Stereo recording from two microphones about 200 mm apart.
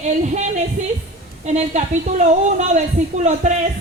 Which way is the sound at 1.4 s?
35° right (ahead or behind).